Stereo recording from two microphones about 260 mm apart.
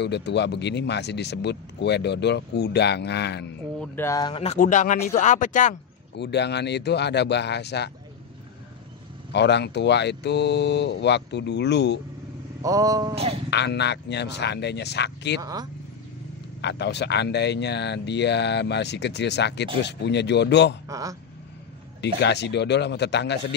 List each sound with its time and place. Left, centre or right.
0.0 s speech: left
3.8 s speech: centre; by 7.9 s left
9.3 s speech: left
12.6 s speech: centre
13.5 s speech: left
15.4 s speech: centre
16.6 s speech: left
20.9 s speech: centre
22.0 s speech: left